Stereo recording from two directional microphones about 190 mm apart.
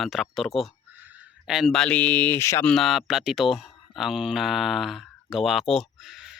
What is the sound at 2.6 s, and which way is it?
Speech, centre (ahead or behind).